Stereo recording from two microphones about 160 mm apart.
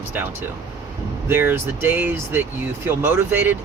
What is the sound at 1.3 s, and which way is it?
Speech, 15° right (ahead or behind).